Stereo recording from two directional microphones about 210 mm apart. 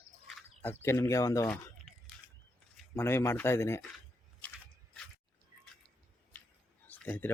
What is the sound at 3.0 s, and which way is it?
Speech, 10° left (ahead or behind).